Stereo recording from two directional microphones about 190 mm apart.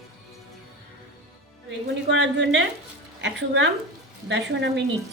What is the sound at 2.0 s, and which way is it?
A woman's voice, 70° right (ahead or behind).